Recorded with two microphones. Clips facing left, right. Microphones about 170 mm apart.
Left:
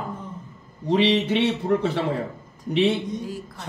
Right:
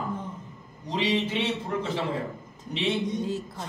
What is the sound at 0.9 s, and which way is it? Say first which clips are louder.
A man's voice: left 7 dB; 65° left (ahead or behind).